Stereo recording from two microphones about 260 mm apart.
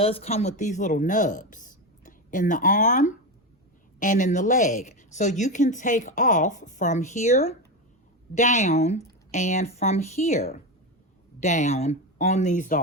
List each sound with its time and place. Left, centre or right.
0.0 s speech: left